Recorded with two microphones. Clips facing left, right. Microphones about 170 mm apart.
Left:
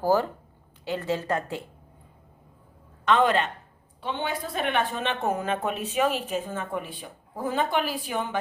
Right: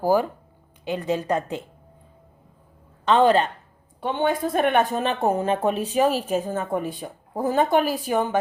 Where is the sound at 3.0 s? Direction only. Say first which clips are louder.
Right 4 dB; 30° right (ahead or behind).